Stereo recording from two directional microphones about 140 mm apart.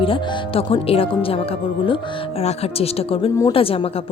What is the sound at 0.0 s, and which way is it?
Speech, 35° left (ahead or behind).